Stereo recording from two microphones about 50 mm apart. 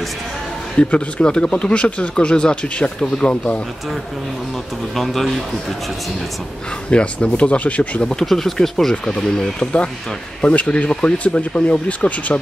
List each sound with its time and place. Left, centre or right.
0.7 s speech: left
4.9 s speech: centre
6.9 s speech: left
8.3 s speech: centre
10.4 s speech: left
10.9 s speech: centre